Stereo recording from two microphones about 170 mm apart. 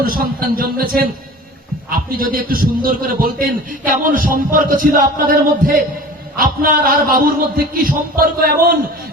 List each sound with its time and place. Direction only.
0.0 s a man's voice: 60° right (ahead or behind)